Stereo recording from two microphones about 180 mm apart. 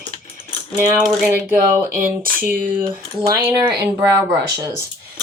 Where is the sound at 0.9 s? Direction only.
Centre (ahead or behind).